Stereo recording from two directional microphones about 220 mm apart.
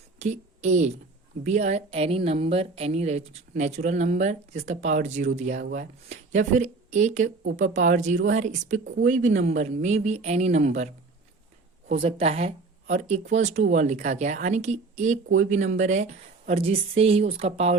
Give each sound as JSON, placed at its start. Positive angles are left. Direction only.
{"t": 0.2, "sound": "a woman's voice", "side_deg": -30}
{"t": 11.9, "sound": "a woman's voice", "side_deg": -25}